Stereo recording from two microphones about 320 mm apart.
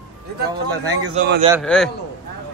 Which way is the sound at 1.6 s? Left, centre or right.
Centre.